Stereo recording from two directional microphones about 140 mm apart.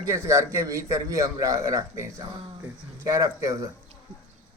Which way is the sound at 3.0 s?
25° right (ahead or behind).